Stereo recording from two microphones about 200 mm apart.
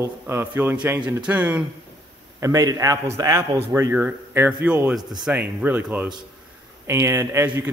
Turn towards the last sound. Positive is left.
turn(degrees=-10)  # may be behind; listen again after turning